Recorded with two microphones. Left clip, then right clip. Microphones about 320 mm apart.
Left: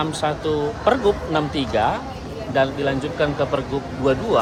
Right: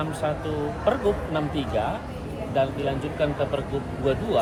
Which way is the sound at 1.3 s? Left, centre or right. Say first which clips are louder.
Left 6 dB; left.